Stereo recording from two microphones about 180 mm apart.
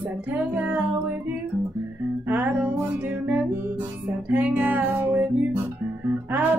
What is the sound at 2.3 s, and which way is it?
Music, 10° right (ahead or behind).